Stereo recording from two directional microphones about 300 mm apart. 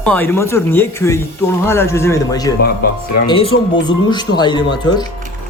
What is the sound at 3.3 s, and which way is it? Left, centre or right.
Speech, centre.